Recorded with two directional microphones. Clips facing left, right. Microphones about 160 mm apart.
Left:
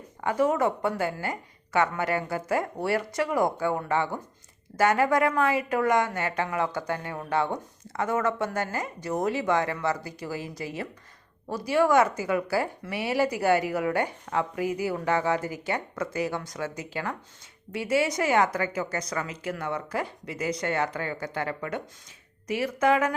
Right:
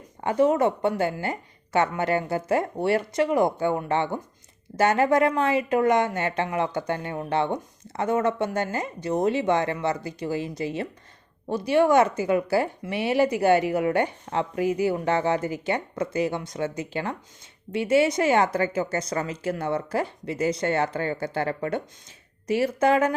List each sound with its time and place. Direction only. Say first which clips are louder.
0.2 s a woman's voice: right 3 dB; 25° right (ahead or behind)